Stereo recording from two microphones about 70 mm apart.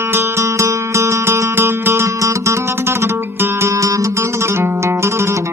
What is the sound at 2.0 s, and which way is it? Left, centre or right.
Music, right.